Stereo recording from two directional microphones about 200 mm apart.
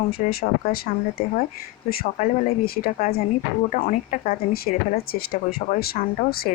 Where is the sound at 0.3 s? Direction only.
50° left (ahead or behind).